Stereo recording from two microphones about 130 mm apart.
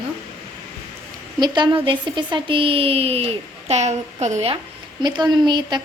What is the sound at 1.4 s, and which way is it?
Speech, 35° right (ahead or behind).